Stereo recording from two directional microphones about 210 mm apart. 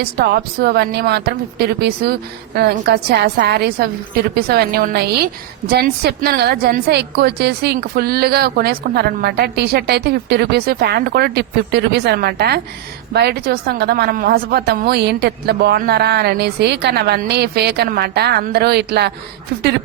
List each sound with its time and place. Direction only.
0.0 s a woman's voice: 50° right (ahead or behind)